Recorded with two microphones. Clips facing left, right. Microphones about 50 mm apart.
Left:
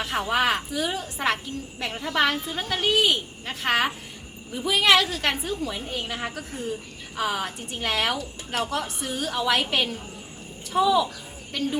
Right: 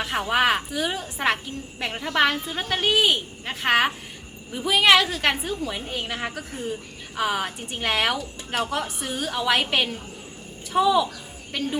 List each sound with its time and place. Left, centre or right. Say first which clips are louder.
0.0 s a woman's voice: right 2 dB; centre